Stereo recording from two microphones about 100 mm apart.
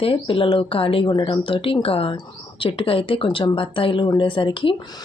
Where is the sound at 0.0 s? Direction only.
60° left (ahead or behind).